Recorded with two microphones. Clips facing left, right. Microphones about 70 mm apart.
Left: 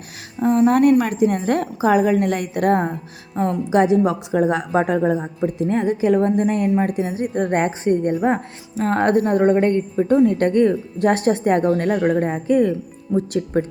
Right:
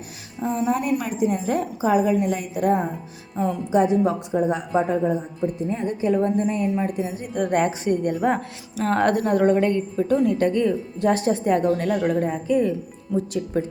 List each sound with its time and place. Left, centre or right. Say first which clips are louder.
0.4 s a woman's voice: left 9 dB; left
3.7 s a woman's voice: left 3 dB; left
6.1 s a woman's voice: left 4 dB; left
6.7 s a woman's voice: left 5 dB; left
7.3 s a woman's voice: even; left
12.5 s a woman's voice: left 6 dB; left